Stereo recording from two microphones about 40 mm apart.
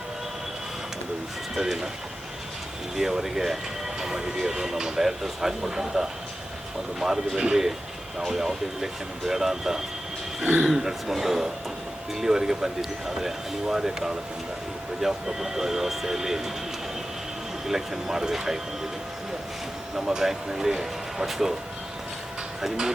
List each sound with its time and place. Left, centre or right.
1.5 s speech: centre
2.9 s speech: centre
10.4 s speech: right
10.7 s speech: centre
17.7 s speech: centre
20.0 s speech: centre
22.6 s speech: centre